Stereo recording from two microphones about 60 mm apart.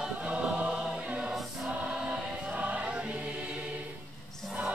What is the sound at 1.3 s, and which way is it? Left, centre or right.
Choir, centre.